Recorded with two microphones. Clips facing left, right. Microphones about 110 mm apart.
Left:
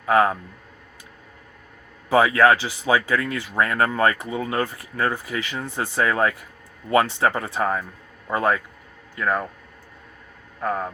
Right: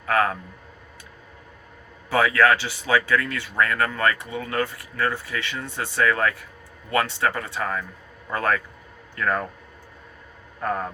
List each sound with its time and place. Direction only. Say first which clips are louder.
0.0 s speech: left 4 dB; 20° left (ahead or behind)
2.0 s speech: left 3 dB; 20° left (ahead or behind)
10.6 s speech: left 1 dB; 5° left (ahead or behind)